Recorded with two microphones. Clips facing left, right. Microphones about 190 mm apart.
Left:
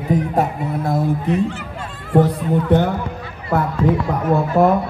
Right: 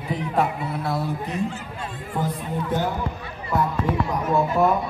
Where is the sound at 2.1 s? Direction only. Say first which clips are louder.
Left 12 dB; 70° left (ahead or behind).